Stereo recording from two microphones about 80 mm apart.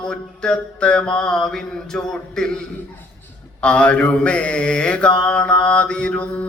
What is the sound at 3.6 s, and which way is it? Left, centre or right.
Mantra, centre.